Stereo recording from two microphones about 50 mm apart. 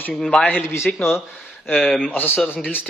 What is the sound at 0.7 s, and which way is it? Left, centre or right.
Speech, left.